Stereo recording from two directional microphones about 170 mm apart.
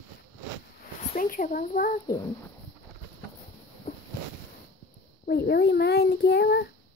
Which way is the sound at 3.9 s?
40° left (ahead or behind).